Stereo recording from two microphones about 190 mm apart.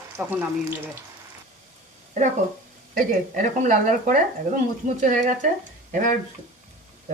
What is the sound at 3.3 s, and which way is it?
Speech, 40° right (ahead or behind).